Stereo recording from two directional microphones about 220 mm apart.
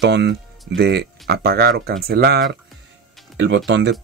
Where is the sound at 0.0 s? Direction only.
50° right (ahead or behind).